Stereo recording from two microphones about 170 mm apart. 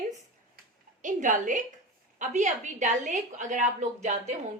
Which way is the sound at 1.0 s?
50° right (ahead or behind).